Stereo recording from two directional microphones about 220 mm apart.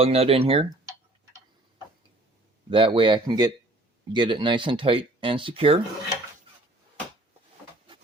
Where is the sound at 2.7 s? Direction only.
25° right (ahead or behind).